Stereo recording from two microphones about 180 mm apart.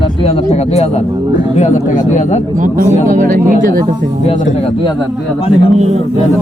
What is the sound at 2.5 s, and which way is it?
Speech, 45° right (ahead or behind).